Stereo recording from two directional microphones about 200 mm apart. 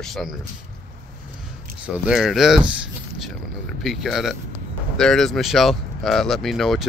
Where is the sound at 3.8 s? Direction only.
Centre (ahead or behind).